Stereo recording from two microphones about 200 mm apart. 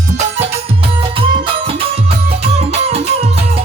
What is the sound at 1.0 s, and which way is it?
Music, 25° right (ahead or behind).